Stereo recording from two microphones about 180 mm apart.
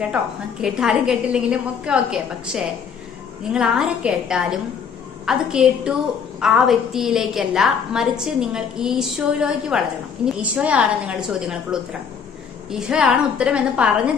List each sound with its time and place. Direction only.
0.6 s a woman's voice: 5° right (ahead or behind)